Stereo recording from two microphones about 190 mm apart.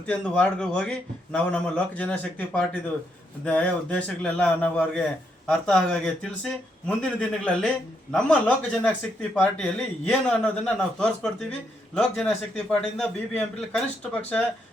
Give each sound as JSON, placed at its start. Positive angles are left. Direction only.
{"t": 0.0, "sound": "a man's voice", "side_deg": 5}